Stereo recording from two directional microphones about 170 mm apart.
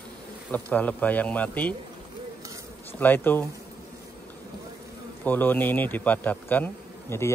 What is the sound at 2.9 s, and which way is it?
Speech, 10° left (ahead or behind).